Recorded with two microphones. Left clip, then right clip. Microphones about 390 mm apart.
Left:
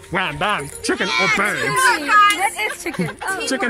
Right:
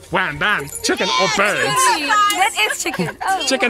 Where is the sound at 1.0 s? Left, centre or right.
Centre.